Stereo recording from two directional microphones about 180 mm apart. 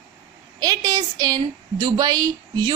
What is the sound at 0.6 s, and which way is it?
A woman's voice, 20° right (ahead or behind).